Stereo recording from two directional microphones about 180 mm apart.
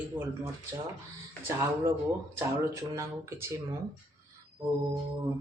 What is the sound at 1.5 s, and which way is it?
Speech, 15° right (ahead or behind).